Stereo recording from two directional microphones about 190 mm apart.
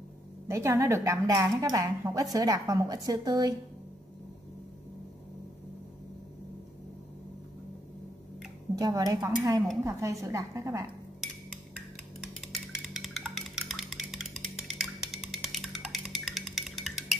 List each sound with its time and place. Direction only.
0.5 s speech: 15° right (ahead or behind)
8.7 s speech: 20° right (ahead or behind)
12.4 s music: centre (ahead or behind)